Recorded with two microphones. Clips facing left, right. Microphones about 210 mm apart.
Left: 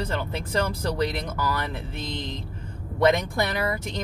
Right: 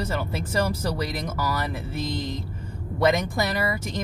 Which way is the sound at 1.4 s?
5° right (ahead or behind).